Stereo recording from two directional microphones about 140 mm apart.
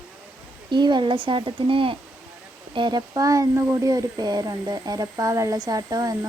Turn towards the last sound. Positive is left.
turn(degrees=-25)  # may be behind; listen again after turning